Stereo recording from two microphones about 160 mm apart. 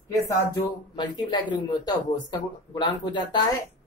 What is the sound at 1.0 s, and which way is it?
Speech, 25° left (ahead or behind).